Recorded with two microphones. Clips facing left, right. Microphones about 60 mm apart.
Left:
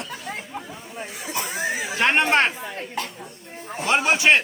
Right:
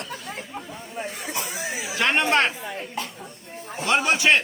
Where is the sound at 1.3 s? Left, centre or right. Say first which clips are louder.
Left 6 dB; left.